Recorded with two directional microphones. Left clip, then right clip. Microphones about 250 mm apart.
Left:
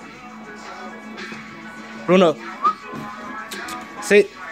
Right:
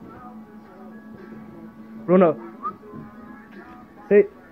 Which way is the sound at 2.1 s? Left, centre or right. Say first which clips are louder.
Left 2 dB; centre.